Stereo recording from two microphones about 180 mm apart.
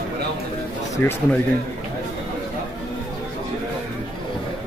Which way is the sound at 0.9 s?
10° left (ahead or behind).